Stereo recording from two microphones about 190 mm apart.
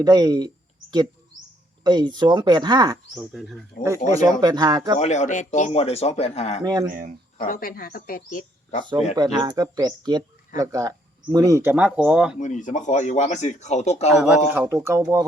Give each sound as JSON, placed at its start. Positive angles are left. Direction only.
{"t": 0.0, "sound": "speech", "side_deg": -20}
{"t": 3.2, "sound": "speech", "side_deg": 0}
{"t": 3.8, "sound": "speech", "side_deg": -15}
{"t": 4.9, "sound": "speech", "side_deg": 35}
{"t": 7.3, "sound": "speech", "side_deg": 50}
{"t": 9.1, "sound": "speech", "side_deg": -20}
{"t": 12.4, "sound": "speech", "side_deg": 40}
{"t": 14.1, "sound": "speech", "side_deg": -5}